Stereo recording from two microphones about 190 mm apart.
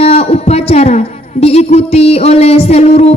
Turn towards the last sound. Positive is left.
turn(degrees=35)  # may be behind; listen again after turning